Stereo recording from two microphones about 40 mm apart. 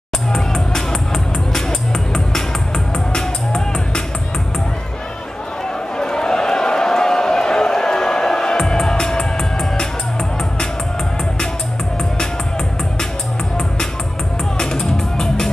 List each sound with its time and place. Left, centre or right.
0.3 s music: centre
3.1 s music: centre
5.9 s a sound: centre
14.8 s music: centre